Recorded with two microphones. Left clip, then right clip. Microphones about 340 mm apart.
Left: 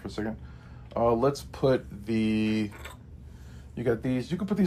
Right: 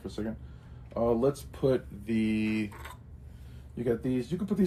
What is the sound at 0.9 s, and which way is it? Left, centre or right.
Speech, left.